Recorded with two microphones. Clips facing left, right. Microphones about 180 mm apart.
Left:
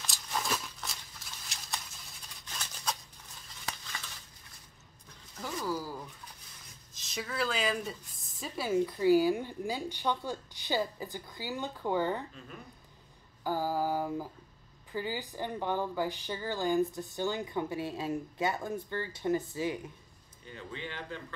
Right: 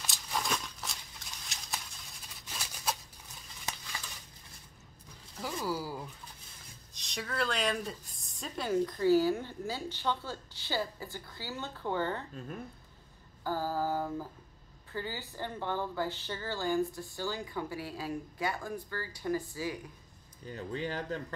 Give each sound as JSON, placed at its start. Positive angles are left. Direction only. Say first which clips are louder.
{"t": 0.0, "sound": "a sound", "louder": "even", "side_deg": 0}
{"t": 1.4, "sound": "patter", "louder": "even", "side_deg": 0}
{"t": 2.4, "sound": "scissors", "louder": "right 1 dB", "side_deg": -5}
{"t": 5.6, "sound": "a sound", "louder": "even", "side_deg": -10}
{"t": 6.9, "sound": "speech", "louder": "left 1 dB", "side_deg": 0}
{"t": 13.4, "sound": "a woman's voice", "louder": "left 2 dB", "side_deg": 15}
{"t": 20.4, "sound": "speech", "louder": "right 6 dB", "side_deg": -40}